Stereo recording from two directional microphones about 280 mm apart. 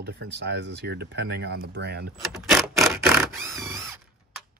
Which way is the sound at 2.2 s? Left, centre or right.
Centre.